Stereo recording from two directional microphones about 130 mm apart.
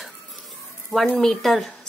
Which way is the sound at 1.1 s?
5° left (ahead or behind).